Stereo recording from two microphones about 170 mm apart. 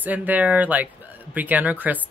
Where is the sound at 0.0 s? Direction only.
10° right (ahead or behind).